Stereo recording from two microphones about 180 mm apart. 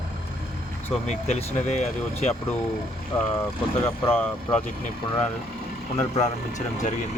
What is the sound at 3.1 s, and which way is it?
Speech, 10° left (ahead or behind).